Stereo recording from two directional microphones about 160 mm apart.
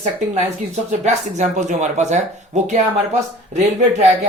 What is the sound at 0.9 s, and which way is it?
Speech, 45° right (ahead or behind).